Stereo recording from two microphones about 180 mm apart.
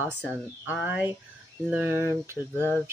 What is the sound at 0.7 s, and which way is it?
Speech, 5° right (ahead or behind).